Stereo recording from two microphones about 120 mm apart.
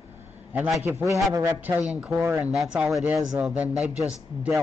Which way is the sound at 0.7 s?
20° right (ahead or behind).